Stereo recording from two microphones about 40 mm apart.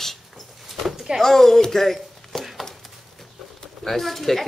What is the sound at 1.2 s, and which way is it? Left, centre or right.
Speech, centre.